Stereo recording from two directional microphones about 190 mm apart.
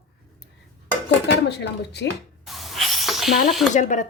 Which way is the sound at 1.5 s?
60° left (ahead or behind).